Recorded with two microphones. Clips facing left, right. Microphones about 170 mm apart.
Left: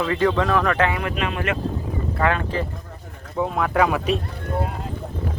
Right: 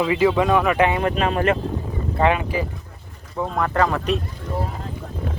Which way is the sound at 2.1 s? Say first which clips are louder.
Right 3 dB; 15° right (ahead or behind).